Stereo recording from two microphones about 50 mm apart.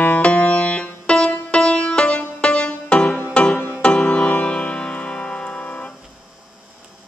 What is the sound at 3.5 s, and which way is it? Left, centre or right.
Music, left.